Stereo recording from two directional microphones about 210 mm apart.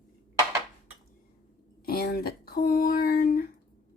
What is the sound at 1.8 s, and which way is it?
Speech, 45° left (ahead or behind).